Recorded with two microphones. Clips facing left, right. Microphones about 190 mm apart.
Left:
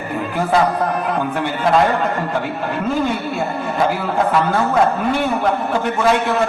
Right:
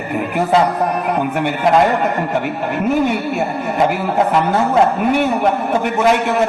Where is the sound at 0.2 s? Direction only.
20° right (ahead or behind).